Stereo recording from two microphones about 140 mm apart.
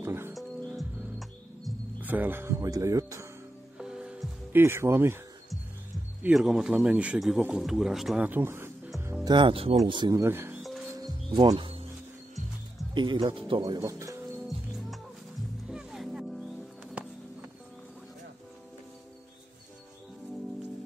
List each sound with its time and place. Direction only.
0.0 s speech: 20° right (ahead or behind)
0.3 s music: centre (ahead or behind)
2.0 s speech: 10° right (ahead or behind)
3.7 s music: 5° right (ahead or behind)
6.2 s a man's voice: 5° right (ahead or behind)
8.2 s a sound: 15° right (ahead or behind)
9.2 s speech: 35° right (ahead or behind)
10.2 s speech: 15° right (ahead or behind)
11.0 s music: 35° right (ahead or behind)
12.9 s speech: 35° right (ahead or behind)
15.7 s music: 5° right (ahead or behind)